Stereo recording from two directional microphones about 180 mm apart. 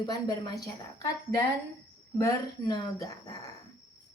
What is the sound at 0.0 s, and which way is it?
A woman's voice, 20° left (ahead or behind).